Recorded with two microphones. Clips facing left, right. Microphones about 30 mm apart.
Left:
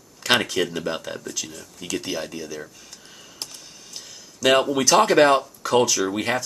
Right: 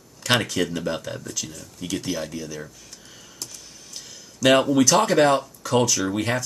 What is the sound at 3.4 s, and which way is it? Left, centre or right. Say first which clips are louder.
Computer keyboard: left 2 dB; left.